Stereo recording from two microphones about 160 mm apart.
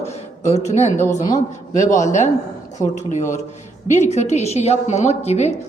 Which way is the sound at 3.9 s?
45° left (ahead or behind).